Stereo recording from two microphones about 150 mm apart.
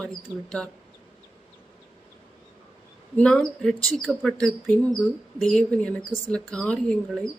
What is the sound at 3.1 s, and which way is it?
A woman's voice, 5° left (ahead or behind).